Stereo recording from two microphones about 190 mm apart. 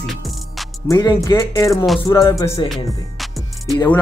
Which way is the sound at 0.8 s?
15° left (ahead or behind).